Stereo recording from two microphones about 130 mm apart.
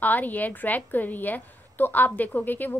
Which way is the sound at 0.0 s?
15° left (ahead or behind).